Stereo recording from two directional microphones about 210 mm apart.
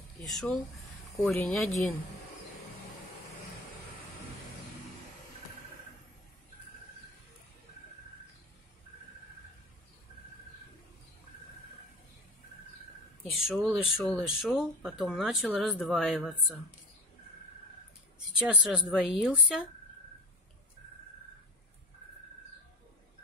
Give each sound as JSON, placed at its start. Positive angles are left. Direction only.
{"t": 0.2, "sound": "a woman's voice", "side_deg": 0}
{"t": 13.2, "sound": "a woman's voice", "side_deg": 5}
{"t": 18.3, "sound": "a woman's voice", "side_deg": -5}